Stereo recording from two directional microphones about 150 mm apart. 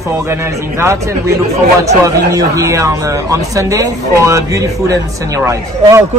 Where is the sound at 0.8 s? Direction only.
20° right (ahead or behind).